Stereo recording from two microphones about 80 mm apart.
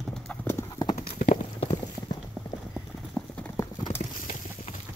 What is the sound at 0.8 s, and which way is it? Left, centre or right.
Clip-clop, left.